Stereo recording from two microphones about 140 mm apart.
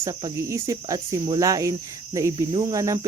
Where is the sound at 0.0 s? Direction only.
30° right (ahead or behind).